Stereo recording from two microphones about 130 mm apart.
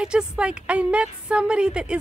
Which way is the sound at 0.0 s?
5° right (ahead or behind).